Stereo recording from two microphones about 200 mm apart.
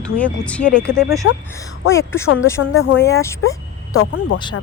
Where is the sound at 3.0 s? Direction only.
15° left (ahead or behind).